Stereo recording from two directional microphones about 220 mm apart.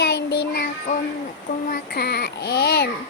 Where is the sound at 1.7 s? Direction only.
45° left (ahead or behind).